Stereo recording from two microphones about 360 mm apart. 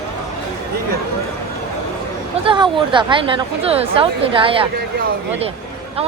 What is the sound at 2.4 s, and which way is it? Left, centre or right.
Speech, centre.